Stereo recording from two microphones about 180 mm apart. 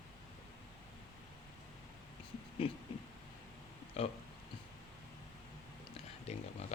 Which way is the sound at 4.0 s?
35° left (ahead or behind).